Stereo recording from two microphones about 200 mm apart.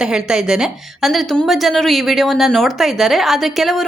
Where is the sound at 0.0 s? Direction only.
5° right (ahead or behind).